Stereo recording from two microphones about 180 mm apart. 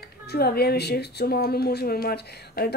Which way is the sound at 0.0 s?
60° left (ahead or behind).